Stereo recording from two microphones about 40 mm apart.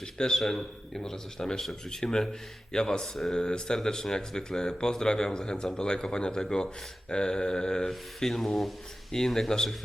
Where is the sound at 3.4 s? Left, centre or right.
Centre.